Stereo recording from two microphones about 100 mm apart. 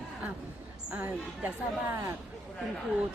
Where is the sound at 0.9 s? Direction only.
15° right (ahead or behind).